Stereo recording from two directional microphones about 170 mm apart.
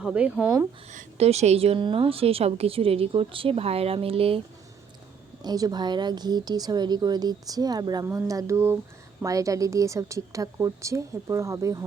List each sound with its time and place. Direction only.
0.0 s speech: 5° right (ahead or behind)
0.9 s a woman's voice: 40° right (ahead or behind)
5.4 s speech: 25° right (ahead or behind)